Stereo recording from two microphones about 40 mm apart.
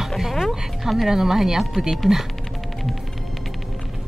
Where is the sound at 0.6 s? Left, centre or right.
Centre.